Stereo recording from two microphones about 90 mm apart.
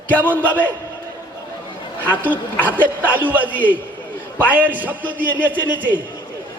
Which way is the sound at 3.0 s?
20° right (ahead or behind).